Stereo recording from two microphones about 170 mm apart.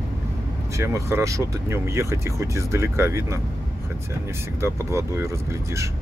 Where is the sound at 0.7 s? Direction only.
15° right (ahead or behind).